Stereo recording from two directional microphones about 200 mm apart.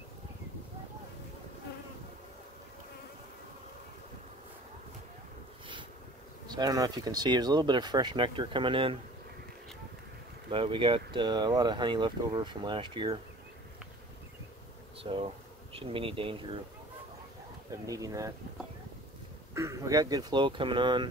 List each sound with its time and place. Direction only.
6.4 s speech: 20° right (ahead or behind)
10.5 s speech: 25° right (ahead or behind)
15.0 s speech: 25° right (ahead or behind)
17.6 s speech: 15° right (ahead or behind)
19.5 s speech: 15° right (ahead or behind)